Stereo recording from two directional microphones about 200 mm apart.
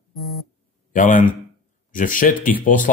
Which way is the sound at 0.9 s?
40° left (ahead or behind).